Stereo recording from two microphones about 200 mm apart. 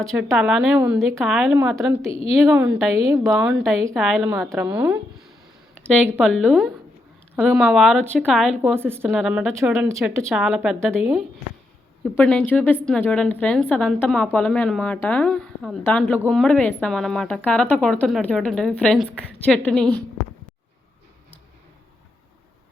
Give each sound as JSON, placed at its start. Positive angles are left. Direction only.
{"t": 0.0, "sound": "a woman's voice", "side_deg": 0}
{"t": 1.2, "sound": "a woman's voice", "side_deg": 0}
{"t": 2.0, "sound": "a woman's voice", "side_deg": 30}
{"t": 2.4, "sound": "a woman's voice", "side_deg": -5}
{"t": 6.1, "sound": "a woman's voice", "side_deg": 0}